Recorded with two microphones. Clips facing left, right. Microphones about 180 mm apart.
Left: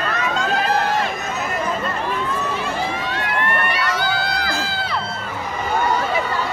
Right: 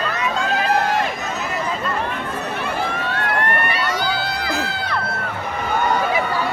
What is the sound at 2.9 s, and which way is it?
Run, 55° right (ahead or behind).